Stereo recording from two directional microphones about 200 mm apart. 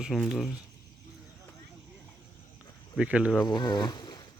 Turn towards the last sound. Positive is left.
turn(degrees=20)  # may be behind; listen again after turning